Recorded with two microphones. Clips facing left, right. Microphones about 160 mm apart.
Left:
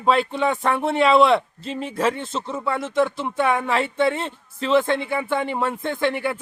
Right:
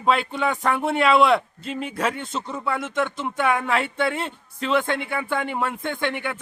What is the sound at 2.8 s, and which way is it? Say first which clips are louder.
Speech: left 7 dB; 30° left (ahead or behind).